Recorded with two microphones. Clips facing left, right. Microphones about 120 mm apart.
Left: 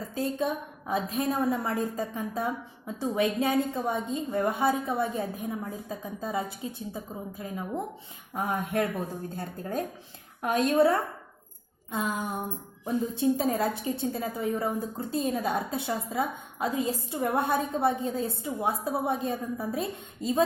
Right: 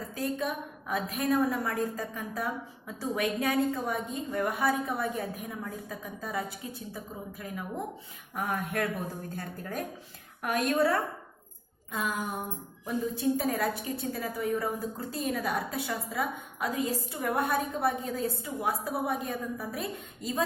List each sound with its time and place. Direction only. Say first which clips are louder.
0.1 s a woman's voice: left 3 dB; 25° left (ahead or behind)